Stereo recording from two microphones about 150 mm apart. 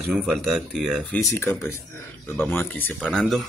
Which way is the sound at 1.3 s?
20° left (ahead or behind).